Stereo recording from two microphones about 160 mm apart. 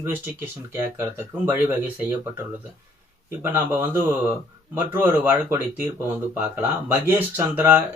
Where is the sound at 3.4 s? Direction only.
15° right (ahead or behind).